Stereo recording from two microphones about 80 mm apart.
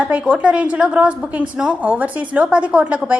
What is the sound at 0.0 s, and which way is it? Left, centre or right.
A woman's voice, centre.